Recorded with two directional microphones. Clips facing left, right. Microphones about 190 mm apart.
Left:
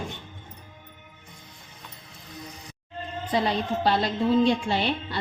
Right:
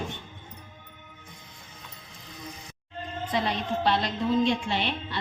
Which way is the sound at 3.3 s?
35° left (ahead or behind).